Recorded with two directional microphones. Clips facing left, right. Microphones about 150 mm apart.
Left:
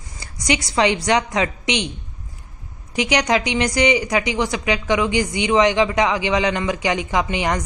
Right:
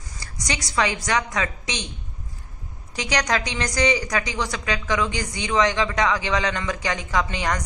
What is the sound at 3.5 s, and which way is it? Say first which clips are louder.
Speech: left 5 dB; 15° left (ahead or behind).